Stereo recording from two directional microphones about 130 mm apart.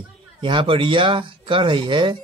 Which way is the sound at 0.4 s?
40° right (ahead or behind).